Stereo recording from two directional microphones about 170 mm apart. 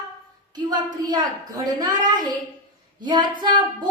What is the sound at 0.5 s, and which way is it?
A woman's voice, 25° right (ahead or behind).